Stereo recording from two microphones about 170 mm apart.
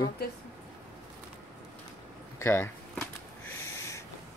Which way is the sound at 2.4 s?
15° left (ahead or behind).